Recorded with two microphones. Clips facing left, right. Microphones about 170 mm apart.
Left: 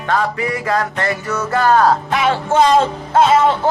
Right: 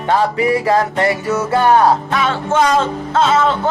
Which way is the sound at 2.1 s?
30° left (ahead or behind).